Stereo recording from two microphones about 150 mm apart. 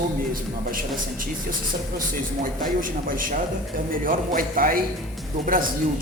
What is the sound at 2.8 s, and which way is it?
A man's voice, 70° right (ahead or behind).